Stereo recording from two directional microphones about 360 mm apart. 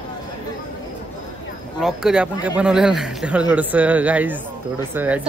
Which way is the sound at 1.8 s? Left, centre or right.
Centre.